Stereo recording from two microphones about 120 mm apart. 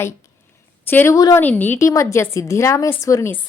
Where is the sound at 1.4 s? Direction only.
15° left (ahead or behind).